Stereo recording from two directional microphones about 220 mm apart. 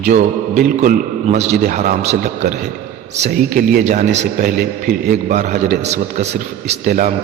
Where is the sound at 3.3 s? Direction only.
45° right (ahead or behind).